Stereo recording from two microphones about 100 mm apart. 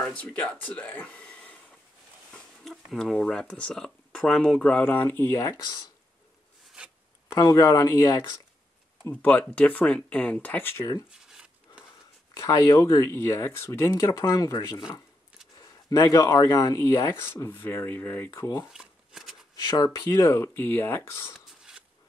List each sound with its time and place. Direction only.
0.1 s speech: 15° left (ahead or behind)
2.3 s speech: centre (ahead or behind); by 5.4 s 25° left (ahead or behind)
5.4 s speech: 45° left (ahead or behind)
7.3 s speech: 40° left (ahead or behind)
9.1 s speech: 15° left (ahead or behind)
11.1 s a sound: 5° right (ahead or behind)
12.4 s speech: 35° left (ahead or behind)
13.9 s speech: 40° left (ahead or behind)
15.9 s speech: 35° left (ahead or behind)
18.7 s shuffling cards: 5° right (ahead or behind)
19.5 s speech: 40° left (ahead or behind)